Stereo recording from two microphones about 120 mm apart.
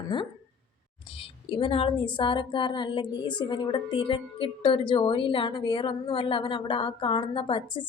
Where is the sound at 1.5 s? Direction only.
50° left (ahead or behind).